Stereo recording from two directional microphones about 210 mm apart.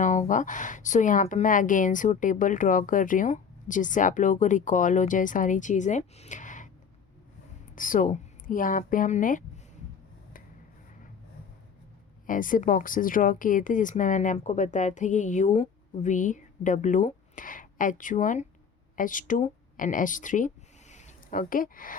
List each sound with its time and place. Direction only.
0.0 s speech: 35° left (ahead or behind)
7.8 s speech: 40° left (ahead or behind)
12.2 s speech: 40° left (ahead or behind)